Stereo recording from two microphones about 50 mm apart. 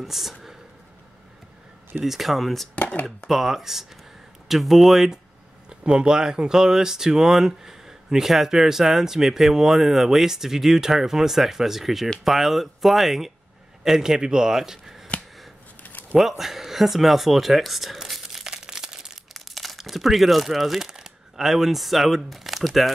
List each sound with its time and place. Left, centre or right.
0.0 s speech: centre
2.0 s speech: centre
2.7 s speech: left
3.3 s speech: centre
5.7 s speech: centre
15.8 s a sound: left
16.2 s speech: centre
18.4 s crumpling: centre
19.3 s speech: centre